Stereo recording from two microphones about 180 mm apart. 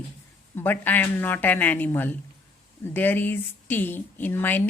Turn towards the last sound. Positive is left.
turn(degrees=10)  # may be behind; listen again after turning